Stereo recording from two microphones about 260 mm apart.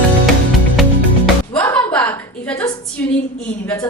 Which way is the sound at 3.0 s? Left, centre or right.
Centre.